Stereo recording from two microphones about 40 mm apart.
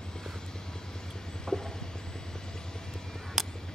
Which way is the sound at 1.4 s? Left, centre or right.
Centre.